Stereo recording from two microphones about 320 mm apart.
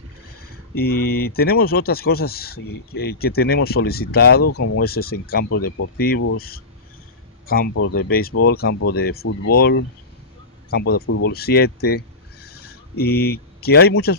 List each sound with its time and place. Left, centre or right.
0.7 s speech: left
4.4 s speech: left
4.8 s speech: left
12.4 s a sound: left
13.0 s speech: left